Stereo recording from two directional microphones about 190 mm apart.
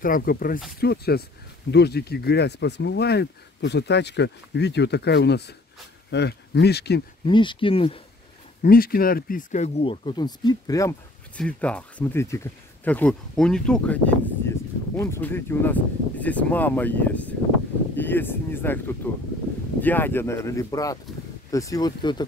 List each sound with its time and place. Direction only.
0.0 s speech: 50° left (ahead or behind)
7.2 s speech: 25° left (ahead or behind)
8.6 s speech: 50° left (ahead or behind); by 11.0 s 20° left (ahead or behind)
11.3 s speech: 5° left (ahead or behind); by 22.2 s 20° left (ahead or behind)